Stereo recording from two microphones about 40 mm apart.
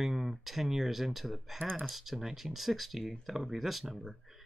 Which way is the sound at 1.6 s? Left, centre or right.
Right.